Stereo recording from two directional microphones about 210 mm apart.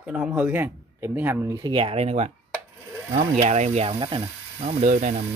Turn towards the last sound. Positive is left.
turn(degrees=-35)  # may be behind; listen again after turning